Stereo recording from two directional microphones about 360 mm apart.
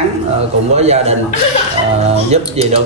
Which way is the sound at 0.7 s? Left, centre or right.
Centre.